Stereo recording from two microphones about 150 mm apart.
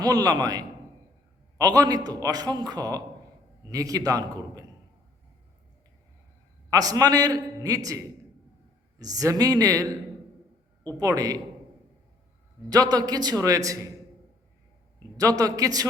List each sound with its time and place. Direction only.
0.0 s a man's voice: 25° right (ahead or behind)
6.7 s a man's voice: 25° right (ahead or behind)
11.0 s a man's voice: 25° right (ahead or behind)
12.7 s a man's voice: 25° right (ahead or behind)
14.9 s a man's voice: 25° right (ahead or behind)